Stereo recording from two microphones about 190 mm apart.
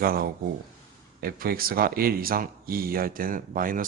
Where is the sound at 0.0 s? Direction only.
50° right (ahead or behind).